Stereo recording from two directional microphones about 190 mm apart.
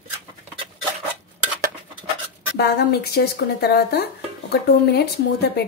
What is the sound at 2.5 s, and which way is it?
Speech, 60° left (ahead or behind).